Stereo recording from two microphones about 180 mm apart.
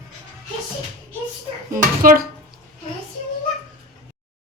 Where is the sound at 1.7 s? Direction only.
50° right (ahead or behind).